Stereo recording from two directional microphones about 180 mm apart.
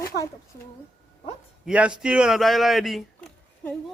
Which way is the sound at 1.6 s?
5° right (ahead or behind).